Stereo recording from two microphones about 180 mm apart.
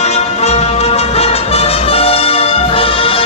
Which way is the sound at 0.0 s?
35° left (ahead or behind).